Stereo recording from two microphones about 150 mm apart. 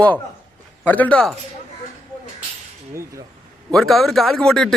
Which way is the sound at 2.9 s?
20° right (ahead or behind).